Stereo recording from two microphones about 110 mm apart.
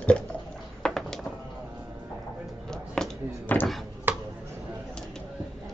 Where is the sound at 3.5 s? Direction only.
15° left (ahead or behind).